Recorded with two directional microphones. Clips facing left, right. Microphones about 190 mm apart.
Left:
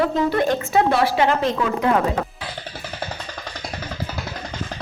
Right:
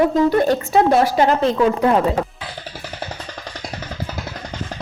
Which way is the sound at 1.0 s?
40° right (ahead or behind).